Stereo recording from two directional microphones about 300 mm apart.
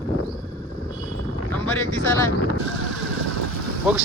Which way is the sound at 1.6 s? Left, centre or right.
Centre.